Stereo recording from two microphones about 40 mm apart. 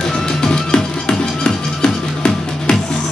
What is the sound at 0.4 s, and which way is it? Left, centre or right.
Music, centre.